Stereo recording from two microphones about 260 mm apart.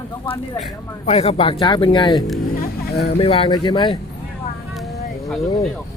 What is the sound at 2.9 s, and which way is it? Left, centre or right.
Speech, left.